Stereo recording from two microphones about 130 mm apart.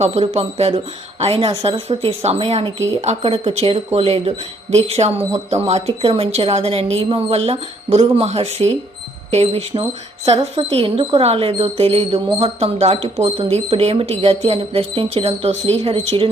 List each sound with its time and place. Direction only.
0.0 s speech: 55° right (ahead or behind)
10.3 s speech: 35° right (ahead or behind)